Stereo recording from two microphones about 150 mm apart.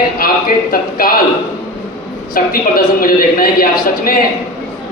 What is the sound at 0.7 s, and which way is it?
Speech, 75° left (ahead or behind).